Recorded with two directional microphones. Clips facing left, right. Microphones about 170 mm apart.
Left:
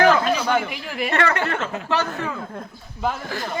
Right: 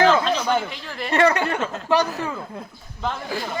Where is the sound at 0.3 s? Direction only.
10° left (ahead or behind).